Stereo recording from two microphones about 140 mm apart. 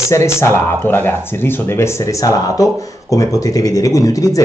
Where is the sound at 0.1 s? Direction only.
20° left (ahead or behind).